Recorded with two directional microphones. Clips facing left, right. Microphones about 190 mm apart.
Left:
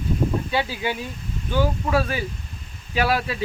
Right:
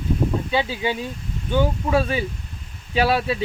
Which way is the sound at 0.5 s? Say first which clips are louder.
Right 2 dB; 20° right (ahead or behind).